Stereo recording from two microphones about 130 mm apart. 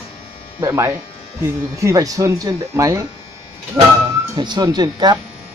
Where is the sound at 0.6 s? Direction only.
20° right (ahead or behind).